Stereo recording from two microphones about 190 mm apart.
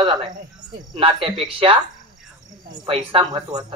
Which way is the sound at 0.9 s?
30° right (ahead or behind).